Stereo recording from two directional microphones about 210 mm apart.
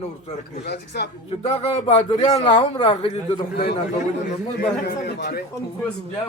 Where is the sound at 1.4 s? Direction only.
30° left (ahead or behind).